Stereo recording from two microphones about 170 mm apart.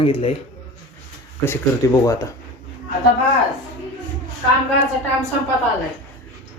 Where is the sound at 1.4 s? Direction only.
15° left (ahead or behind).